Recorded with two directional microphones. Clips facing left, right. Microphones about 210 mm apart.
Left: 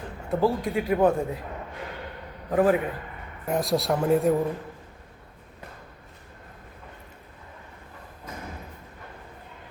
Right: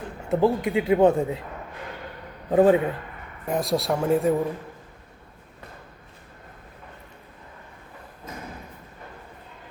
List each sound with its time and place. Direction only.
0.3 s speech: 20° right (ahead or behind)
2.5 s speech: 25° right (ahead or behind)
3.4 s speech: centre (ahead or behind)